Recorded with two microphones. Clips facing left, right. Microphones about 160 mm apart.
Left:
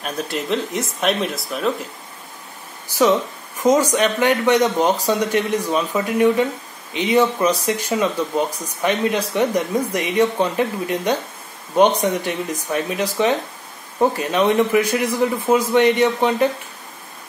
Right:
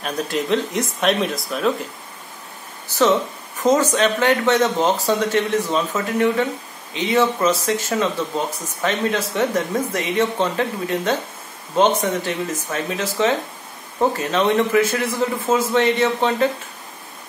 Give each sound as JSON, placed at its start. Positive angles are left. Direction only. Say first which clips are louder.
{"t": 0.0, "sound": "speech", "louder": "right 2 dB", "side_deg": 0}
{"t": 3.6, "sound": "speech", "louder": "left 1 dB", "side_deg": 10}